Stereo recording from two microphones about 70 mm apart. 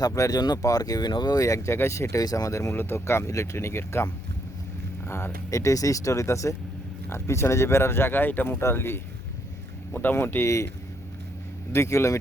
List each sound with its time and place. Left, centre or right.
0.3 s speech: left
0.6 s speech: left
1.5 s speech: left
5.0 s speech: left
5.5 s speech: left
11.7 s speech: left